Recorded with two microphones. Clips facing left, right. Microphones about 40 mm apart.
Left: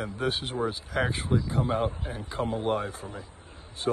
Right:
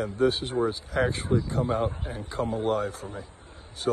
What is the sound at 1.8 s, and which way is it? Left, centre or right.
A man's voice, left.